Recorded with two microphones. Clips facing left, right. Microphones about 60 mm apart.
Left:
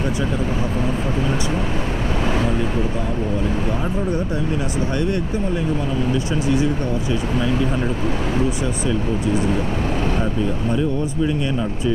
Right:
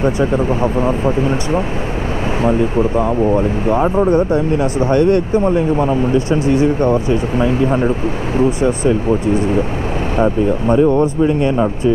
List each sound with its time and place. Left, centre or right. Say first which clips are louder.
0.0 s speech: right 7 dB; right
3.3 s speech: right 8 dB; right
3.8 s speech: right 10 dB; right
10.2 s speech: right 8 dB; right
11.2 s speech: right 7 dB; right